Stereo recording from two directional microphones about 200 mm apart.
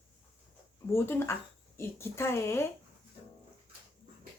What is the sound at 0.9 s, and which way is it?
Speech, 10° left (ahead or behind).